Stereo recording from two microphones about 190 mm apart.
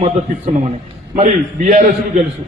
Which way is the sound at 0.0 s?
35° right (ahead or behind).